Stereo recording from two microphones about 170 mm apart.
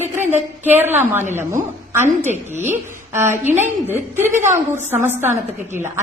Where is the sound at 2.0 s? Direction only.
40° right (ahead or behind).